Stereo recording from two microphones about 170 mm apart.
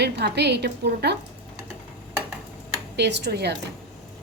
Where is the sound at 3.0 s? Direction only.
90° right.